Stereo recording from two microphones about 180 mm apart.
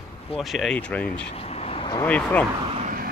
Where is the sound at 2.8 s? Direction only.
50° right (ahead or behind).